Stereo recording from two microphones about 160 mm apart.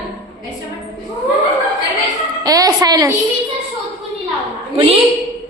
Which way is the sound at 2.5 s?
20° right (ahead or behind).